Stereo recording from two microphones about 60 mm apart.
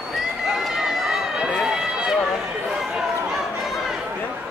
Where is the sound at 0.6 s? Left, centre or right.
Centre.